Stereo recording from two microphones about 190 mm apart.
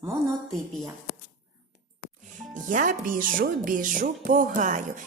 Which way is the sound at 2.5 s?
40° right (ahead or behind).